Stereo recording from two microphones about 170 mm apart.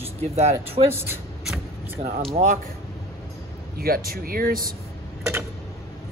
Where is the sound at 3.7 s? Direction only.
60° right (ahead or behind).